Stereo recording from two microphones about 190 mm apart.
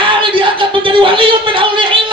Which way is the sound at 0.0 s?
25° right (ahead or behind).